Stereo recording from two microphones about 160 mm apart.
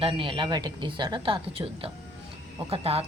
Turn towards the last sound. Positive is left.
turn(degrees=-35)  # may be behind; listen again after turning